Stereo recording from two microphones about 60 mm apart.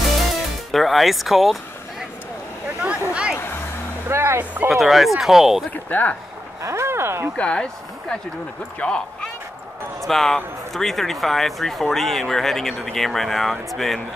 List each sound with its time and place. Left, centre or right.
0.7 s speech: centre
2.8 s a sound: centre
4.1 s speech: right
4.6 s speech: centre
5.7 s speech: left
6.6 s speech: right
7.3 s speech: centre
10.0 s speech: centre